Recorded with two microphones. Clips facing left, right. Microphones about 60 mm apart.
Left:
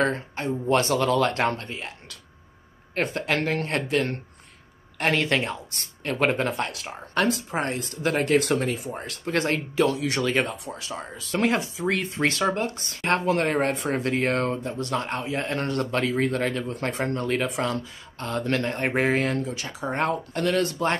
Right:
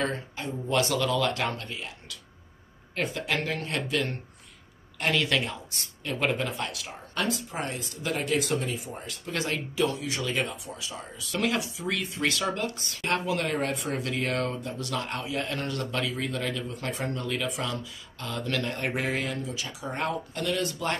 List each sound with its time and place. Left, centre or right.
0.0 s speech: left
2.9 s speech: left
9.8 s speech: left
11.3 s speech: left
11.7 s speech: left
12.0 s speech: left